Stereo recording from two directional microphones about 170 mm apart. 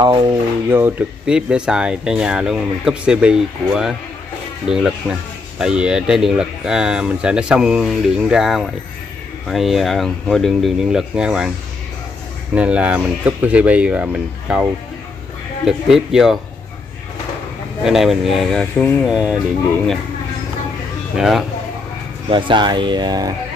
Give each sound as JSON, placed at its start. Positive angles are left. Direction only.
{"t": 0.0, "sound": "speech", "side_deg": -25}
{"t": 0.7, "sound": "speech", "side_deg": -10}
{"t": 12.5, "sound": "speech", "side_deg": -5}
{"t": 17.8, "sound": "speech", "side_deg": 0}
{"t": 19.0, "sound": "speech", "side_deg": -5}
{"t": 21.2, "sound": "speech", "side_deg": 0}
{"t": 22.3, "sound": "speech", "side_deg": -25}